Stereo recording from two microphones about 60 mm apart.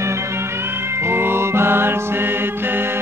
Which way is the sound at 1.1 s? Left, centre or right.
Right.